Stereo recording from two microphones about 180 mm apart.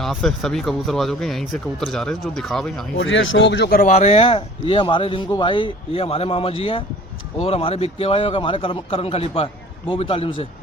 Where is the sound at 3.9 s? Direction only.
35° left (ahead or behind).